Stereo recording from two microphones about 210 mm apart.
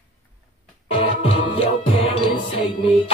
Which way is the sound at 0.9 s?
25° left (ahead or behind).